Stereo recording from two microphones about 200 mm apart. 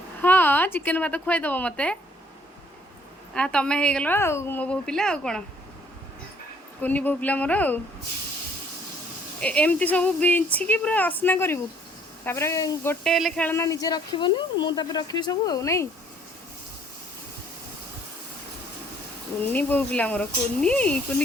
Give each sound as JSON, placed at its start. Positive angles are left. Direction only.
{"t": 0.2, "sound": "speech", "side_deg": 10}
{"t": 3.3, "sound": "a woman's voice", "side_deg": 5}
{"t": 6.8, "sound": "speech", "side_deg": 10}
{"t": 9.4, "sound": "speech", "side_deg": 5}
{"t": 19.4, "sound": "speech", "side_deg": 10}